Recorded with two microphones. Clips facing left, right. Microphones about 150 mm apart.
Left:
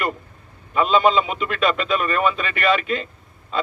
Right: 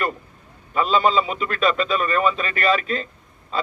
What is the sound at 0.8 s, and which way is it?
A man's voice, 40° right (ahead or behind).